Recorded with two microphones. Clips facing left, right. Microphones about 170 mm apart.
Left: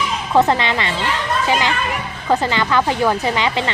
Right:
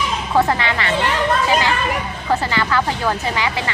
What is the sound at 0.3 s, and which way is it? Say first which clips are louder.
Speech: left 3 dB; 20° left (ahead or behind).